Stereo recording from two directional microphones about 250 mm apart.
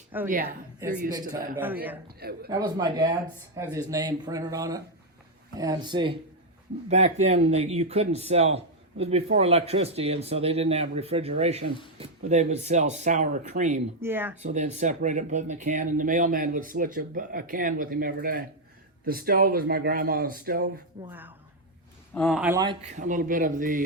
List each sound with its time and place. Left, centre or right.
0.3 s speech: right
0.8 s speech: centre
2.0 s speech: right
2.5 s speech: centre
14.0 s speech: centre
14.4 s speech: right
21.1 s speech: centre
22.1 s speech: centre
22.6 s speech: centre
23.0 s speech: right